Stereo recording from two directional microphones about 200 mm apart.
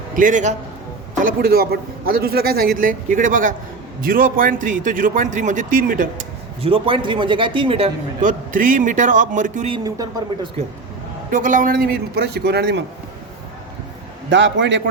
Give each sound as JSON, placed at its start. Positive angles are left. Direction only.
{"t": 0.2, "sound": "a man's voice", "side_deg": -40}
{"t": 6.6, "sound": "a man's voice", "side_deg": -30}
{"t": 8.2, "sound": "a man's voice", "side_deg": -40}
{"t": 11.3, "sound": "a man's voice", "side_deg": -40}
{"t": 14.3, "sound": "a man's voice", "side_deg": -65}